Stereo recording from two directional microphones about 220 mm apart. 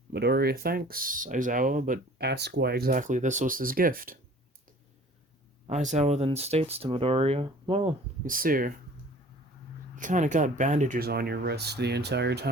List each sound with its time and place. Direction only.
0.1 s speech: 45° right (ahead or behind)
5.6 s speech: 30° right (ahead or behind)
8.2 s speech: 40° right (ahead or behind)
9.9 s speech: 35° right (ahead or behind)